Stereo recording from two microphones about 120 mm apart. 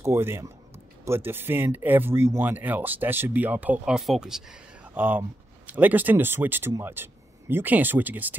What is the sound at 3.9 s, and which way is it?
Speech, centre (ahead or behind).